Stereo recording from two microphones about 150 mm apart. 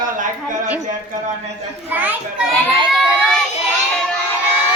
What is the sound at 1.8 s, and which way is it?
Speech, 10° right (ahead or behind).